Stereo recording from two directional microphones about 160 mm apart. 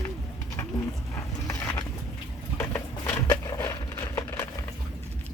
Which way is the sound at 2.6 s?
15° left (ahead or behind).